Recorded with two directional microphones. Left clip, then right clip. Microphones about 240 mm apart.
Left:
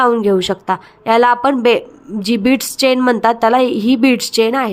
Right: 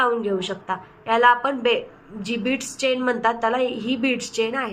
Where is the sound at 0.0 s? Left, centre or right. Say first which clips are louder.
Left 9 dB; left.